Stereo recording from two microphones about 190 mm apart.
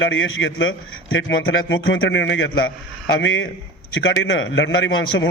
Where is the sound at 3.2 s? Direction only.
90° left.